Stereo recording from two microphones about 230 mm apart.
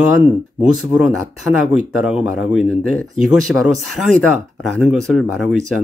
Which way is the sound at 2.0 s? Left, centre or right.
Centre.